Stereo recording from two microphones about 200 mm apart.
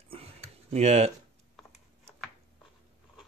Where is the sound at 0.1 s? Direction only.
30° right (ahead or behind).